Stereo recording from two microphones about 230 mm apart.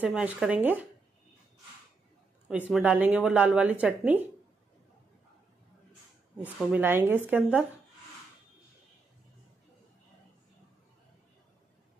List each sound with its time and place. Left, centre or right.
0.0 s speech: centre
2.4 s speech: centre
6.3 s speech: centre